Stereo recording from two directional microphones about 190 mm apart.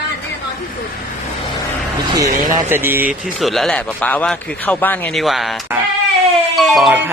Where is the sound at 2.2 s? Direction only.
45° right (ahead or behind).